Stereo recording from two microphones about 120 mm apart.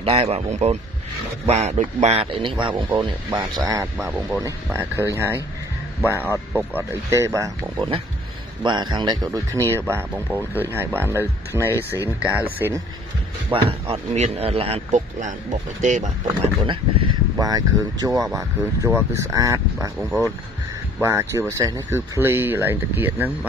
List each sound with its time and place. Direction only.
0.0 s a man's voice: 55° right (ahead or behind)
2.6 s speech: 40° right (ahead or behind)
3.3 s speech: 30° right (ahead or behind)
8.6 s speech: 40° right (ahead or behind); by 12.7 s 15° right (ahead or behind)
13.5 s speech: 50° right (ahead or behind)
14.1 s a man's voice: 65° right (ahead or behind); by 16.1 s 90° right
16.6 s speech: 40° right (ahead or behind)
21.0 s speech: 25° right (ahead or behind)